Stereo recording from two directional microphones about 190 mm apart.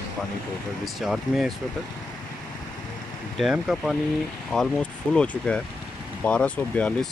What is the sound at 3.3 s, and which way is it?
Speech, 5° right (ahead or behind).